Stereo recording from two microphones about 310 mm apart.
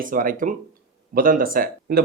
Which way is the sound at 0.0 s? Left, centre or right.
Right.